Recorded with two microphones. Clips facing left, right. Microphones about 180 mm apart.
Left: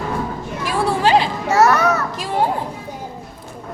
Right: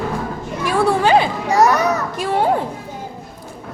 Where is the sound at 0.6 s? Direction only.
55° right (ahead or behind).